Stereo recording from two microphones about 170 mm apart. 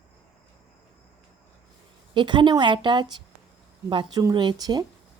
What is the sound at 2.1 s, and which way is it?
A woman's voice, 25° right (ahead or behind).